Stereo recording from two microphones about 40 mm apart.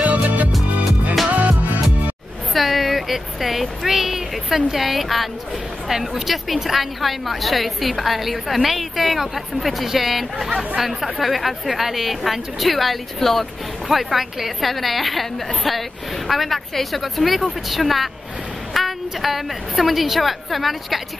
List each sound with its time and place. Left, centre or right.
0.0 s music: right
2.5 s a woman's voice: centre